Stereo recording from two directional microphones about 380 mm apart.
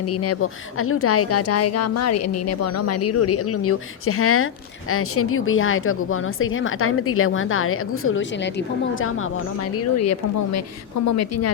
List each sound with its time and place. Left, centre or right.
0.0 s speech: left